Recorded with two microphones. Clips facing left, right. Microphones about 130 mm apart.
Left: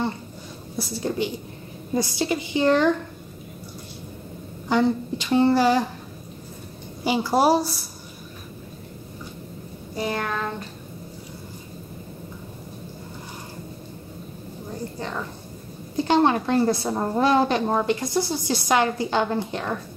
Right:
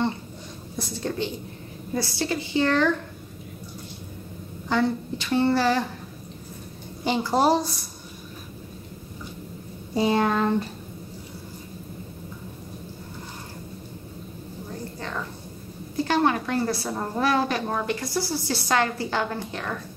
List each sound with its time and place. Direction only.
0.7 s a woman's voice: 10° left (ahead or behind)
4.6 s a woman's voice: 15° left (ahead or behind)
7.1 s a woman's voice: 10° left (ahead or behind)
9.9 s child singing: 25° right (ahead or behind)
15.0 s a sound: 15° left (ahead or behind)
16.0 s a woman's voice: 25° left (ahead or behind)